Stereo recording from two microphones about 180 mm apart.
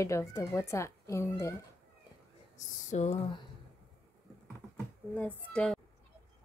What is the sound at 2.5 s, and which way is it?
Speech, 40° left (ahead or behind).